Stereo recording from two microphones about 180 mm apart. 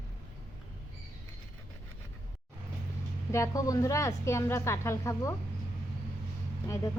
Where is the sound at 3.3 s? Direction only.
15° left (ahead or behind).